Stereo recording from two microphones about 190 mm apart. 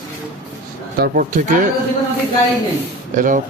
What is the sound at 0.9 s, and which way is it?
Speech, 50° right (ahead or behind).